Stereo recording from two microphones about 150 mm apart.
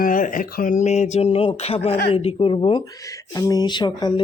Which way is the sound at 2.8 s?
20° left (ahead or behind).